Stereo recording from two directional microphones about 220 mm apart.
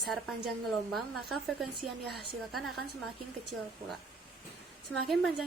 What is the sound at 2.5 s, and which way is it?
Speech, centre (ahead or behind).